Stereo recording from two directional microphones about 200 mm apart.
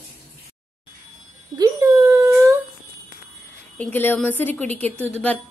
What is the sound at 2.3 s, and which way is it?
Humming, 10° right (ahead or behind).